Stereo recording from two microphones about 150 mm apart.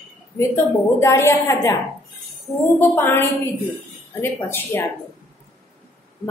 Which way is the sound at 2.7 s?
15° left (ahead or behind).